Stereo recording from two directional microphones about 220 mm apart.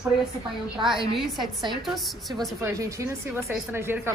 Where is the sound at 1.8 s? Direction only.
Centre (ahead or behind).